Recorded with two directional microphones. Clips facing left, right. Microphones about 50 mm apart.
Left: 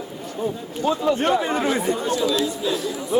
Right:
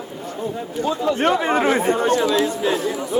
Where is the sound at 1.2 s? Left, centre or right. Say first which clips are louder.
Right 3 dB; right.